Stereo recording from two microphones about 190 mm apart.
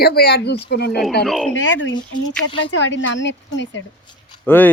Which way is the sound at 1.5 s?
75° left (ahead or behind).